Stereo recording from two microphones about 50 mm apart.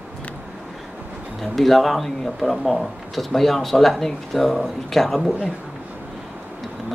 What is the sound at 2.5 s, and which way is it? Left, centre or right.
Speech, centre.